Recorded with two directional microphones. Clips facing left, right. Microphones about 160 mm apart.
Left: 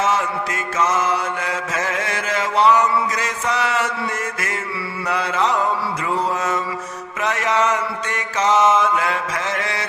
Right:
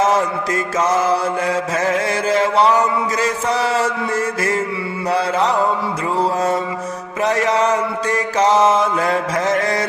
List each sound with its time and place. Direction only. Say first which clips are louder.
0.0 s mantra: right 4 dB; 40° right (ahead or behind)
7.2 s mantra: right 3 dB; 35° right (ahead or behind)